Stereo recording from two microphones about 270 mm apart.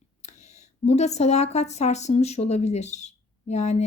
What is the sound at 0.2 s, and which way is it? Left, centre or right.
Speech, left.